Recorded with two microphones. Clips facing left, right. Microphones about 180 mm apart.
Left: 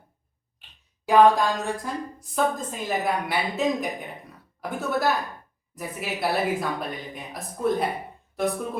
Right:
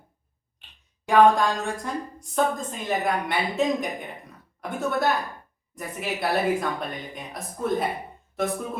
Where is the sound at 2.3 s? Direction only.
Centre (ahead or behind).